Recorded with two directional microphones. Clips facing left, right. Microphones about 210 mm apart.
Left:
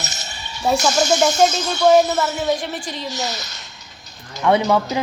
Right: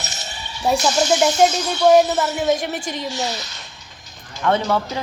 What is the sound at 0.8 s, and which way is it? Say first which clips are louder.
Speech: even; 45° left (ahead or behind).